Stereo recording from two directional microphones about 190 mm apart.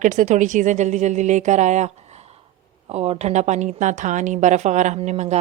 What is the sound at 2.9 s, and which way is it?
A woman's voice, 35° right (ahead or behind).